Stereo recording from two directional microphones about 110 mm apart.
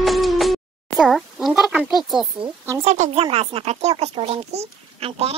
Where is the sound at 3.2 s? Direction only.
60° right (ahead or behind).